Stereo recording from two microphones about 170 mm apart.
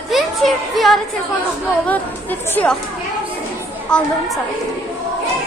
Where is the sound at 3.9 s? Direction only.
5° left (ahead or behind).